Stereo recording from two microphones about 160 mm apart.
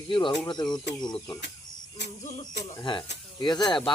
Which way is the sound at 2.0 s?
90° left.